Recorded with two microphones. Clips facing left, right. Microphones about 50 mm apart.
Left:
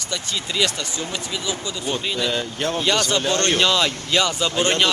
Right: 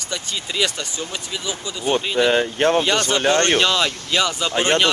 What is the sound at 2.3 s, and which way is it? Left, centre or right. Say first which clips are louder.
Speech: right 7 dB; right.